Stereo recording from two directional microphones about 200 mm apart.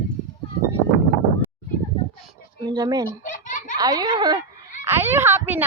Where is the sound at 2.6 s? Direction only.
20° right (ahead or behind).